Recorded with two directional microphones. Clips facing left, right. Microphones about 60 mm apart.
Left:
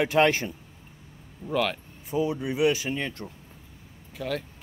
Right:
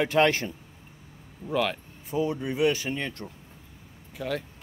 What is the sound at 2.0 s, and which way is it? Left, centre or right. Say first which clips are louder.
Speech: left 1 dB; centre.